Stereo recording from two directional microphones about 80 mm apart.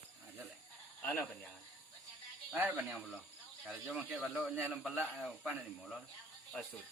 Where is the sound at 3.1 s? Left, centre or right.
Centre.